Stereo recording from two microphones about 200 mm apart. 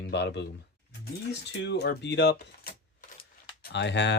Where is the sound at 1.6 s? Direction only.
55° left (ahead or behind).